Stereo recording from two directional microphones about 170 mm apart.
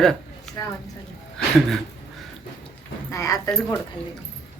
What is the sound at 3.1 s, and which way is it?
Speech, 20° left (ahead or behind).